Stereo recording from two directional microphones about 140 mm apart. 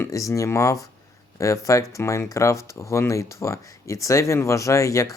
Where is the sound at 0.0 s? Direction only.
25° left (ahead or behind).